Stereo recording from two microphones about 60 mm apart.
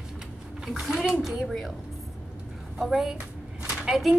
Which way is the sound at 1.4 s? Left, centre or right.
Centre.